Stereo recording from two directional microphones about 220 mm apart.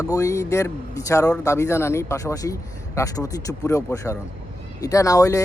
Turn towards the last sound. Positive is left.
turn(degrees=15)  # may be behind; listen again after turning